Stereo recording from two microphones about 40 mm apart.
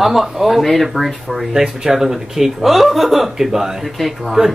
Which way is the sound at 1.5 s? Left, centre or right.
Centre.